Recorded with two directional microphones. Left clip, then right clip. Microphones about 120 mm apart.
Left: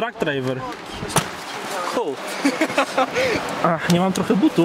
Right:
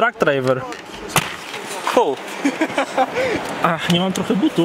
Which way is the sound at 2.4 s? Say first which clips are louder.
Left 2 dB; 35° left (ahead or behind).